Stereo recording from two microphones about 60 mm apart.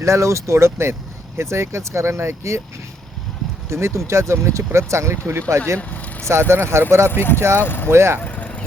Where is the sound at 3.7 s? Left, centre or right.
Right.